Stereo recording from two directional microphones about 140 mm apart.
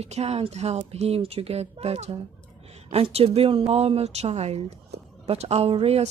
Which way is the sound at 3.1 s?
45° right (ahead or behind).